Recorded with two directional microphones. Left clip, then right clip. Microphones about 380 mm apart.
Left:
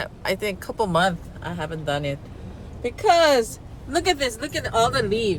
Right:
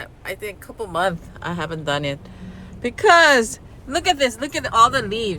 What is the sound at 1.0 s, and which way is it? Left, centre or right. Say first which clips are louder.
Speech: right 1 dB; centre.